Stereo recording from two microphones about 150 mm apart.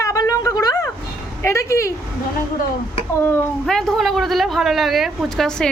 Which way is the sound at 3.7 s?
Centre (ahead or behind).